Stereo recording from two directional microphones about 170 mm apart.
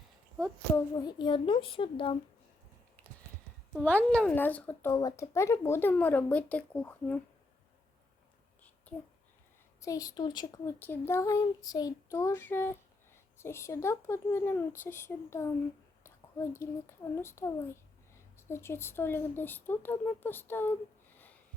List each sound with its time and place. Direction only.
0.9 s a woman's voice: 25° left (ahead or behind)
3.8 s speech: 5° left (ahead or behind)
9.8 s a child's voice: 20° left (ahead or behind)